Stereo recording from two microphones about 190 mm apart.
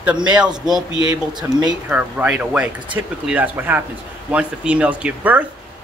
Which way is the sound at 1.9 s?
10° right (ahead or behind).